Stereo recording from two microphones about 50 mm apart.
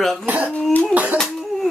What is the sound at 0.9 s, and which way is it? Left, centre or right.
Speech, right.